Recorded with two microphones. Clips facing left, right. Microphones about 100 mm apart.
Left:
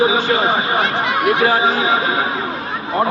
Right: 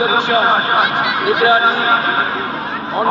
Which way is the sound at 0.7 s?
15° right (ahead or behind).